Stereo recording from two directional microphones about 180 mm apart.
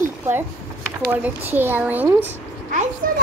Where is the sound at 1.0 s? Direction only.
10° right (ahead or behind).